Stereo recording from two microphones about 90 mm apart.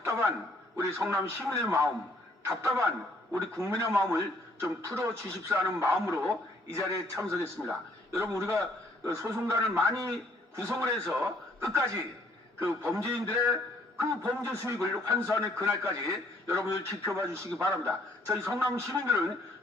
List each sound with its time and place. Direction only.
0.0 s a man's voice: 30° right (ahead or behind)